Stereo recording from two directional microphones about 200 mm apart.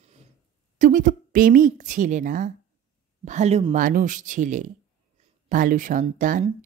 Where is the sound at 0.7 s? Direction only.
40° right (ahead or behind).